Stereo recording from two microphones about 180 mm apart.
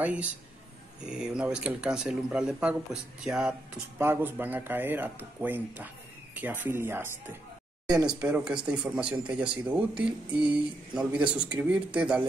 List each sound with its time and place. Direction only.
0.0 s speech: 5° right (ahead or behind)
7.8 s a sound: 20° right (ahead or behind)
8.1 s speech: 5° right (ahead or behind)